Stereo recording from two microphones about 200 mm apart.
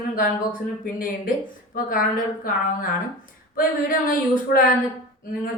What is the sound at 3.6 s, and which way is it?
Speech, 45° left (ahead or behind).